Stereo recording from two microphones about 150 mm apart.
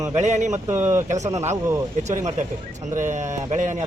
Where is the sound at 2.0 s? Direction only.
50° right (ahead or behind).